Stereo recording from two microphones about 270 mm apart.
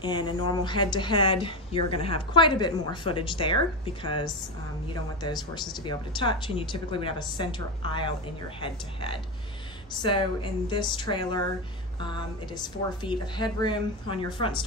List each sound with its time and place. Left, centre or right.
0.0 s speech: centre
12.5 s speech: centre